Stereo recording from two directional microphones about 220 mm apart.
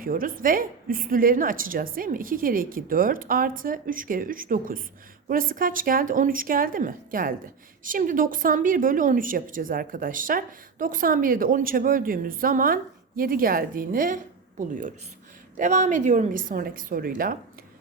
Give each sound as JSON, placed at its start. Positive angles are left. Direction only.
{"t": 0.0, "sound": "speech", "side_deg": -40}
{"t": 15.5, "sound": "speech", "side_deg": -35}